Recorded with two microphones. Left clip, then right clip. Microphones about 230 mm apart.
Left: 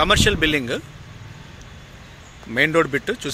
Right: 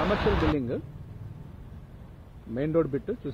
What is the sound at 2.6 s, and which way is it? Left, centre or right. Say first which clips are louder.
Speech: left 7 dB; centre.